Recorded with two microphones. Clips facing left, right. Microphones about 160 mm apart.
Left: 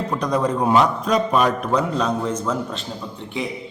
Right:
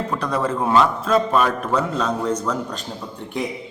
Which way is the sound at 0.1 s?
15° left (ahead or behind).